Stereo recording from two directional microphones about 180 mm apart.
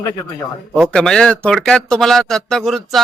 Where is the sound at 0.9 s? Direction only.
5° left (ahead or behind).